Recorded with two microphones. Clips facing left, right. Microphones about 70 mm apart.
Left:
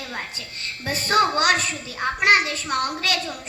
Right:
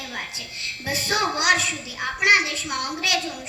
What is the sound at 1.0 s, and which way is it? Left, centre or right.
A child's voice, left.